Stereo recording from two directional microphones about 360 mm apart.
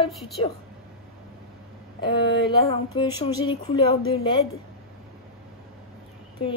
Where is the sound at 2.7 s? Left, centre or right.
Centre.